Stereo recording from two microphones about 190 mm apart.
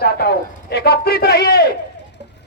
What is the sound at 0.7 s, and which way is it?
Battle cry, 55° left (ahead or behind).